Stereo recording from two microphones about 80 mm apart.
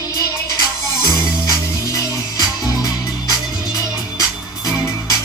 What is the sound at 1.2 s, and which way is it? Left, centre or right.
Music, left.